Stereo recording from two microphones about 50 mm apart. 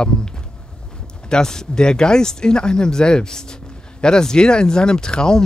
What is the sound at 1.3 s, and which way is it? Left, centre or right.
Speech, centre.